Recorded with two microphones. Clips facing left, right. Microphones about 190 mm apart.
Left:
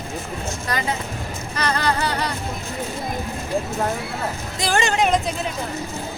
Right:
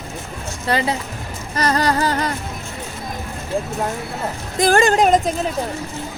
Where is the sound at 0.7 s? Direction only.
30° right (ahead or behind).